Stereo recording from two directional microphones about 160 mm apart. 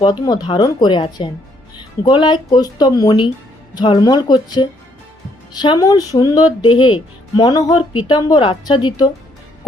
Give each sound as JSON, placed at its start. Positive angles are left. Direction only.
{"t": 0.0, "sound": "speech", "side_deg": 25}